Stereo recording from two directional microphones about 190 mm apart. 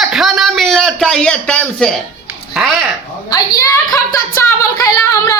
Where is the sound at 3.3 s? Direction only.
15° left (ahead or behind).